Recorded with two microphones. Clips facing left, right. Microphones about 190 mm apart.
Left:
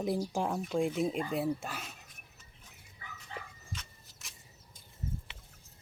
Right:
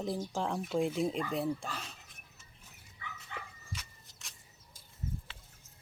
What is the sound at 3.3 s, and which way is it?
Dog, 35° left (ahead or behind).